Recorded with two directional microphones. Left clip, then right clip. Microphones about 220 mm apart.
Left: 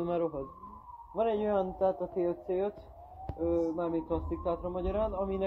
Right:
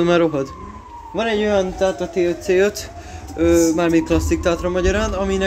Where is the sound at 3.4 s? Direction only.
20° right (ahead or behind).